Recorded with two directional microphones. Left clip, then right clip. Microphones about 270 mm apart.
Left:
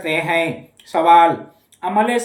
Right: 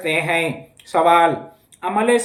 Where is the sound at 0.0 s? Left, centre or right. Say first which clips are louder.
Left 1 dB; centre.